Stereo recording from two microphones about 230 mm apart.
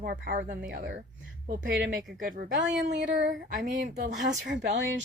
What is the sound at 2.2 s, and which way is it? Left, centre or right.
Speech, right.